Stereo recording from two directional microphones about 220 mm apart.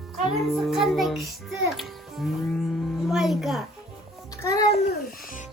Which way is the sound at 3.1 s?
Centre (ahead or behind).